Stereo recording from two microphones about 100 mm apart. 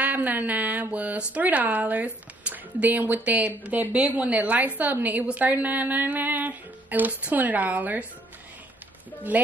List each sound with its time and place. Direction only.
0.0 s a woman's voice: 15° right (ahead or behind)
9.3 s speech: 15° right (ahead or behind)